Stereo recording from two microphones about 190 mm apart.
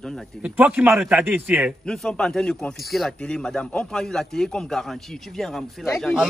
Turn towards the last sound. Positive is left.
turn(degrees=0)  # may be behind; listen again after turning